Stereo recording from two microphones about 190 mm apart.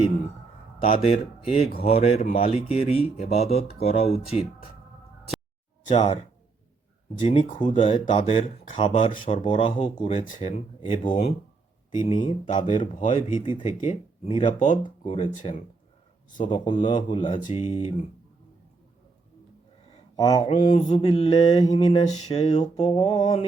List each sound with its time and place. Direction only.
0.8 s speech: 30° left (ahead or behind)
5.9 s mantra: 25° left (ahead or behind)
7.6 s mantra: 25° left (ahead or behind)
10.0 s speech: 35° left (ahead or behind)
13.4 s mantra: 25° left (ahead or behind)
13.8 s speech: 30° left (ahead or behind)
14.7 s speech: 40° left (ahead or behind)
16.5 s mantra: 25° left (ahead or behind)
17.5 s speech: 30° left (ahead or behind)
20.1 s mantra: 20° left (ahead or behind)
21.7 s speech: 35° left (ahead or behind)
22.6 s mantra: 20° left (ahead or behind)